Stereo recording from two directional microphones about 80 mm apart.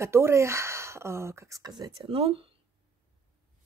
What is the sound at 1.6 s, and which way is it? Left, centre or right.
Speech, right.